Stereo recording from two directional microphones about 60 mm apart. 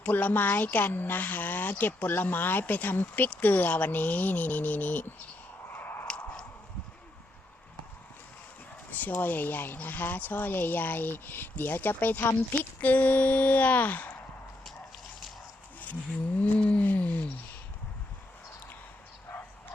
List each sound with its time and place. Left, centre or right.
0.0 s speech: left
5.6 s a sound: left
8.9 s a sound: left
9.2 s speech: left
12.8 s speech: left
16.4 s speech: left